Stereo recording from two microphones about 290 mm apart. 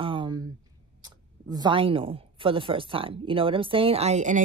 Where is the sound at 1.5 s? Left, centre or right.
Centre.